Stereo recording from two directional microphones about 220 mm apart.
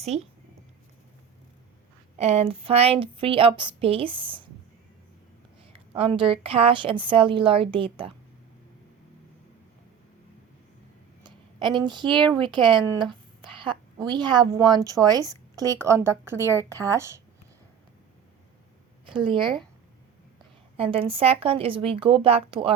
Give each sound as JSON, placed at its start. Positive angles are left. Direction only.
{"t": 0.1, "sound": "a woman's voice", "side_deg": -30}
{"t": 2.1, "sound": "a woman's voice", "side_deg": -30}
{"t": 5.7, "sound": "a woman's voice", "side_deg": -25}
{"t": 11.2, "sound": "a woman's voice", "side_deg": -20}
{"t": 16.4, "sound": "a woman's voice", "side_deg": 10}
{"t": 16.6, "sound": "a woman's voice", "side_deg": -15}
{"t": 19.0, "sound": "speech", "side_deg": -20}
{"t": 19.4, "sound": "speech", "side_deg": 0}
{"t": 20.7, "sound": "a woman's voice", "side_deg": -25}